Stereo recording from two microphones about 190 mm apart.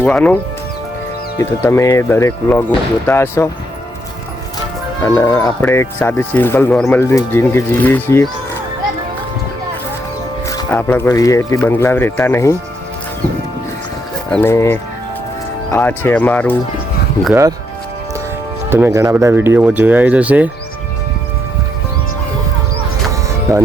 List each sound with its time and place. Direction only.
0.0 s speech: 10° left (ahead or behind)
1.4 s speech: 15° left (ahead or behind)
5.0 s speech: 15° left (ahead or behind)
10.5 s speech: 15° left (ahead or behind)
14.3 s speech: 10° left (ahead or behind)
18.7 s speech: 15° right (ahead or behind)
23.5 s speech: 15° right (ahead or behind)